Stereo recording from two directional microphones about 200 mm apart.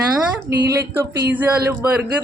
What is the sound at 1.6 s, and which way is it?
Child singing, 10° right (ahead or behind).